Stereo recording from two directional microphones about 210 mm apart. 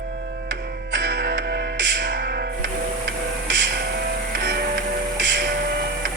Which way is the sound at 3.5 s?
55° right (ahead or behind).